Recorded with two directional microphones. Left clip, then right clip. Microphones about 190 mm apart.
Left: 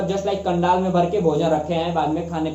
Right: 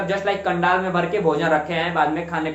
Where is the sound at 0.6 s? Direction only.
15° right (ahead or behind).